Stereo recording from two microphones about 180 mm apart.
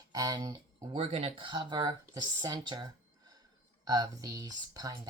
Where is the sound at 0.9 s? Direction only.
30° right (ahead or behind).